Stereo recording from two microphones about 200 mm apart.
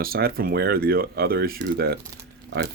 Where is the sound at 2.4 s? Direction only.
60° right (ahead or behind).